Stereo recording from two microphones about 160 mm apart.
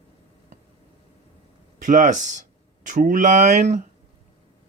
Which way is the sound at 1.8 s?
50° right (ahead or behind).